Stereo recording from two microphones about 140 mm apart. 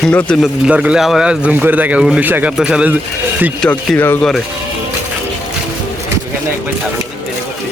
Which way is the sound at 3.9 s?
15° left (ahead or behind).